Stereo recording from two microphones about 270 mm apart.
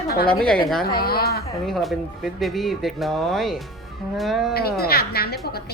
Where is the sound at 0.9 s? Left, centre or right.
Left.